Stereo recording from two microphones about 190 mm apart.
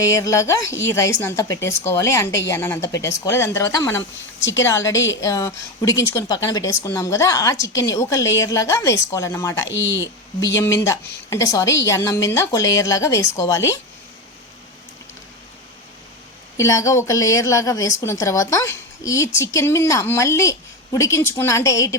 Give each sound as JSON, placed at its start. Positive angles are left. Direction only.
{"t": 0.0, "sound": "a woman's voice", "side_deg": 15}
{"t": 4.4, "sound": "a woman's voice", "side_deg": 80}
{"t": 4.6, "sound": "a woman's voice", "side_deg": 15}
{"t": 9.6, "sound": "speech", "side_deg": 75}
{"t": 10.4, "sound": "a woman's voice", "side_deg": 15}
{"t": 16.6, "sound": "a woman's voice", "side_deg": 15}